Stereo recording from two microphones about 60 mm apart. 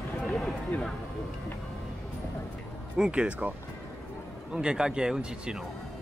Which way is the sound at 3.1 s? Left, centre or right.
Centre.